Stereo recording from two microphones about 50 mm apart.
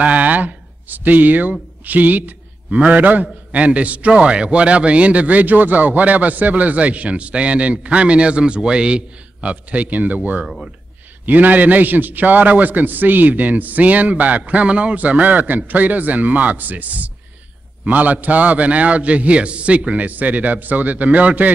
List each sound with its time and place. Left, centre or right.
0.0 s a man's voice: right